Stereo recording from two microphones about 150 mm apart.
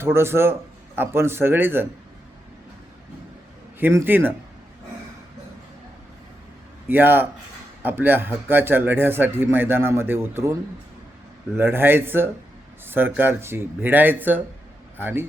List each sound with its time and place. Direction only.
0.0 s a man's voice: 15° right (ahead or behind)
3.8 s a man's voice: 15° right (ahead or behind)
6.8 s a man's voice: 15° right (ahead or behind)